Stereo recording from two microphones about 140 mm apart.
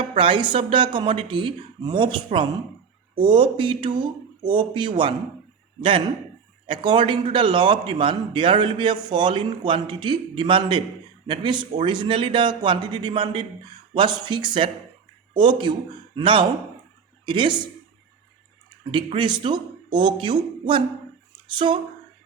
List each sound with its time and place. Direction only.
0.0 s a man's voice: 40° right (ahead or behind)
6.7 s a man's voice: 35° right (ahead or behind)
18.9 s a man's voice: 35° right (ahead or behind)